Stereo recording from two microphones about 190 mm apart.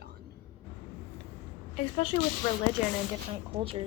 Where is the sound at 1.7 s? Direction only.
30° left (ahead or behind).